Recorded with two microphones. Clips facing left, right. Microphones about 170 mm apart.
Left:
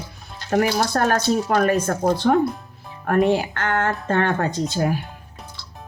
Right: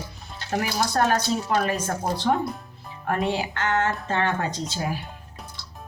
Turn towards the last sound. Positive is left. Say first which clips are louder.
# left 7 dB
turn(degrees=50)  # may be behind; listen again after turning